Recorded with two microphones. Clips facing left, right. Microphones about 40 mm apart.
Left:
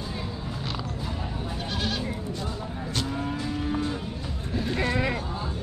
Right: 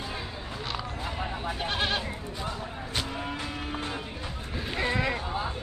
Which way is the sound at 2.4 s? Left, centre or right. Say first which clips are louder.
Left 2 dB; centre.